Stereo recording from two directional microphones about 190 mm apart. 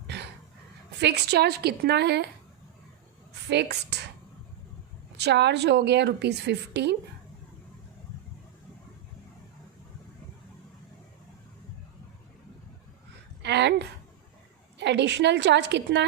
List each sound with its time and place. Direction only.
1.0 s a woman's voice: 60° right (ahead or behind)
3.5 s a woman's voice: 60° right (ahead or behind)
5.1 s a woman's voice: 60° right (ahead or behind)
13.4 s a sound: 65° right (ahead or behind)
14.8 s a woman's voice: 65° right (ahead or behind)